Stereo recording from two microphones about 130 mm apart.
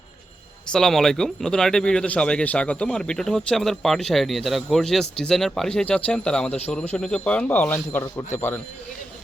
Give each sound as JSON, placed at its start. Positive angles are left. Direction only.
{"t": 0.7, "sound": "speech", "side_deg": 5}